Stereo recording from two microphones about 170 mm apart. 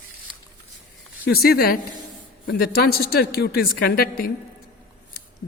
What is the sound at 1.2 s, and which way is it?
A woman's voice, 65° left (ahead or behind).